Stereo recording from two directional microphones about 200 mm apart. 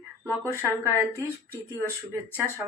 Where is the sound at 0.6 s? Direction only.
10° right (ahead or behind).